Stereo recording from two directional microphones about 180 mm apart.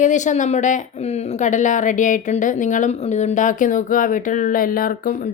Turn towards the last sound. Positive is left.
turn(degrees=50)  # may be behind; listen again after turning